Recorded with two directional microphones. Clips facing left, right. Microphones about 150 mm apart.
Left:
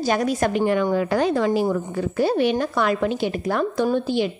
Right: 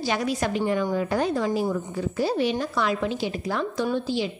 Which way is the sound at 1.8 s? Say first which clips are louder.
Left 4 dB; 55° left (ahead or behind).